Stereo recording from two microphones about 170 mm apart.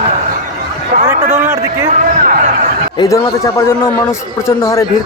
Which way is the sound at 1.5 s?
15° right (ahead or behind).